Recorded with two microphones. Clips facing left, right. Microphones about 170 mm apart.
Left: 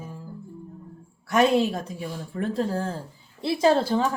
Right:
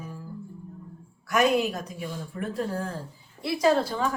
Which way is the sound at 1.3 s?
30° left (ahead or behind).